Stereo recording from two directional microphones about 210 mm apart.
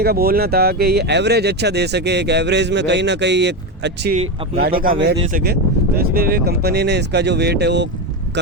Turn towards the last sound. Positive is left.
turn(degrees=-55)  # may be behind; listen again after turning